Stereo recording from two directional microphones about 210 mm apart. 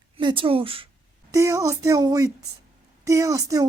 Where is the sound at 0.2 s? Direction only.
25° right (ahead or behind).